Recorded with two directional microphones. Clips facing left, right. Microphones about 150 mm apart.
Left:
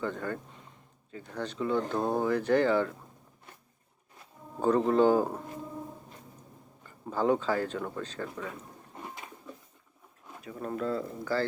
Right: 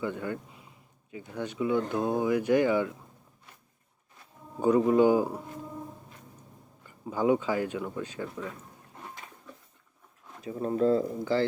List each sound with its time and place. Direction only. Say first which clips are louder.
0.0 s speech: right 1 dB; 10° right (ahead or behind)
4.6 s speech: right 2 dB; 10° right (ahead or behind)
6.8 s speech: right 1 dB; 15° right (ahead or behind)
10.4 s speech: right 7 dB; 25° right (ahead or behind)
11.0 s speech: right 4 dB; 20° right (ahead or behind)